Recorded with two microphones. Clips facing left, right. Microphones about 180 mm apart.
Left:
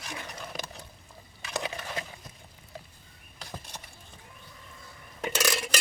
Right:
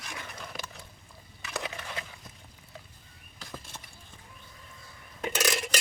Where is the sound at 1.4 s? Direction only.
30° left (ahead or behind).